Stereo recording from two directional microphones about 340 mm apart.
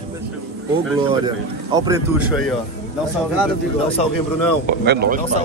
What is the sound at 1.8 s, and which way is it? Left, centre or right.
Speech, centre.